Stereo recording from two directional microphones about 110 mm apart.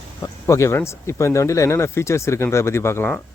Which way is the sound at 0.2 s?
25° left (ahead or behind).